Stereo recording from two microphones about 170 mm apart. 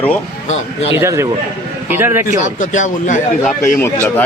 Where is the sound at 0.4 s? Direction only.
40° left (ahead or behind).